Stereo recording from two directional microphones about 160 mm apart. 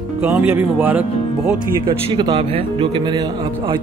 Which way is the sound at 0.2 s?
10° right (ahead or behind).